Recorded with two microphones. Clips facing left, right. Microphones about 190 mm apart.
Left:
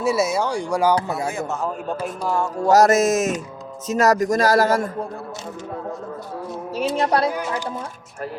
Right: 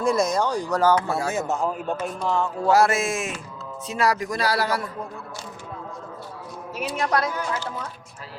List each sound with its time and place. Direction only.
0.0 s speech: 5° left (ahead or behind)
1.3 s speech: 20° right (ahead or behind)
2.0 s speech: 10° left (ahead or behind)
2.6 s music: 40° left (ahead or behind)
3.8 s a man's voice: 45° left (ahead or behind)
6.7 s music: 30° left (ahead or behind)